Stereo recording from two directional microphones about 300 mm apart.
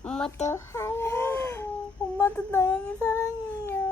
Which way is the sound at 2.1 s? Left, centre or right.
Centre.